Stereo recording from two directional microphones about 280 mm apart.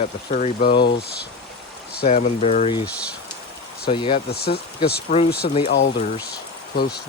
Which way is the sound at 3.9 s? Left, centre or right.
Centre.